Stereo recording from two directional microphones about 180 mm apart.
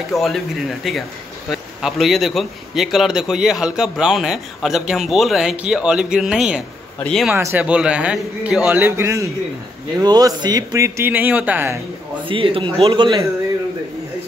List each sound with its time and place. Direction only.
0.1 s a man's voice: centre (ahead or behind)
7.3 s speech: 10° right (ahead or behind)
12.3 s a man's voice: 30° right (ahead or behind)